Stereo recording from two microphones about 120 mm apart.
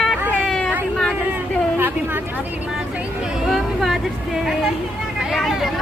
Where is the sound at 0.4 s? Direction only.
5° left (ahead or behind).